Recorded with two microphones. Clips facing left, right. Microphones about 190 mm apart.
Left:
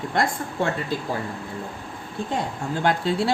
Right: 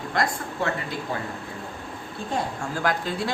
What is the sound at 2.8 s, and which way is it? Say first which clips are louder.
Speech: left 4 dB; 25° left (ahead or behind).